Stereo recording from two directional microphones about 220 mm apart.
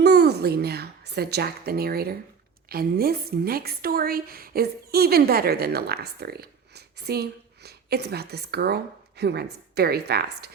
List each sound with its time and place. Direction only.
0.0 s a woman's voice: 50° right (ahead or behind)